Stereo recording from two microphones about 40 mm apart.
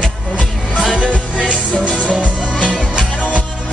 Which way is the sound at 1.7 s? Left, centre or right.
Left.